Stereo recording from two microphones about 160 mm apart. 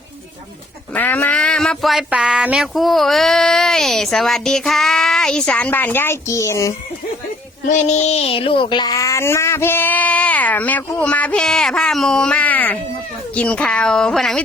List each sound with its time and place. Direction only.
0.9 s speech: 10° left (ahead or behind)
7.6 s a child's voice: 50° left (ahead or behind); by 14.4 s 5° left (ahead or behind)